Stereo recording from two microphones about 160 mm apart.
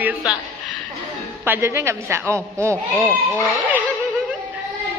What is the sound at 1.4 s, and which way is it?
A man's voice, 15° right (ahead or behind).